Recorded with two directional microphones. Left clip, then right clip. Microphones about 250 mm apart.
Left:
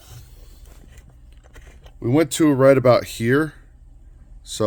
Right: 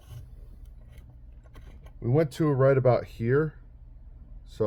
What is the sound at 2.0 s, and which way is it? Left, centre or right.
Speech, left.